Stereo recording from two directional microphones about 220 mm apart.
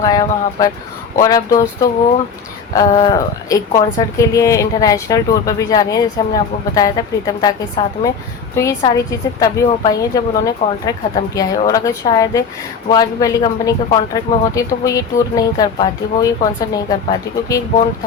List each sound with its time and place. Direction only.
0.0 s a woman's voice: 15° left (ahead or behind)